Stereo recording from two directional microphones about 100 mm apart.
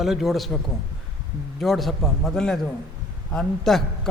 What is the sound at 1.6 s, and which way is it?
A man's voice, centre (ahead or behind).